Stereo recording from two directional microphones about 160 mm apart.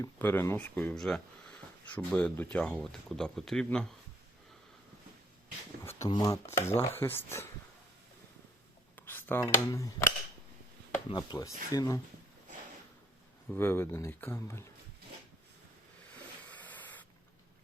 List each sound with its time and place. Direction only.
0.0 s speech: 10° left (ahead or behind)
5.8 s a sound: 15° left (ahead or behind)
6.1 s speech: 25° left (ahead or behind)
9.0 s a sound: 10° left (ahead or behind)
9.6 s speech: 20° left (ahead or behind)
11.1 s speech: 25° left (ahead or behind)
13.5 s speech: 15° left (ahead or behind)
16.5 s spray: 10° left (ahead or behind)